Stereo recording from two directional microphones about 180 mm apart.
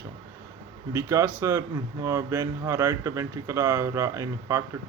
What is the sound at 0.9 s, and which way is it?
Speech, 15° right (ahead or behind).